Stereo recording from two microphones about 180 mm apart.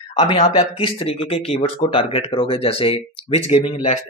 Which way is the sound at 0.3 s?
30° left (ahead or behind).